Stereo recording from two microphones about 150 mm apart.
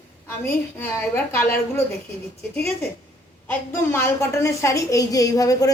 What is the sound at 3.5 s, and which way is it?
A woman's voice, 15° left (ahead or behind).